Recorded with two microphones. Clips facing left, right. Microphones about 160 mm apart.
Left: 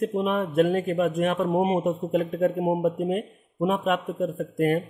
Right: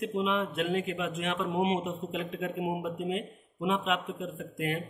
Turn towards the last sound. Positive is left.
turn(degrees=45)  # may be behind; listen again after turning